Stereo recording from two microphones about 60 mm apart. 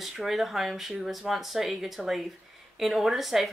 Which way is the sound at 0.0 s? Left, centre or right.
Centre.